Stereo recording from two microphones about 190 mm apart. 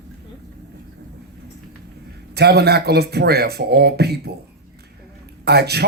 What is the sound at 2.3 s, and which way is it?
Speech, 60° right (ahead or behind).